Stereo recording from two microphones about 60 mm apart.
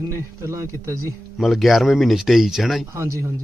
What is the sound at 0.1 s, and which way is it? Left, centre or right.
Speech, right.